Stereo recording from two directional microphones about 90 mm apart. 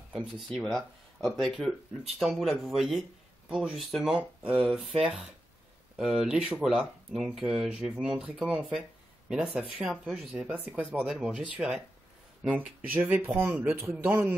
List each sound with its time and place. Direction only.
0.1 s speech: 10° right (ahead or behind)
0.7 s speech: 5° left (ahead or behind)
4.2 s speech: 15° right (ahead or behind)
10.5 s speech: 20° right (ahead or behind)
11.0 s speech: 10° right (ahead or behind)
12.4 s speech: 20° right (ahead or behind)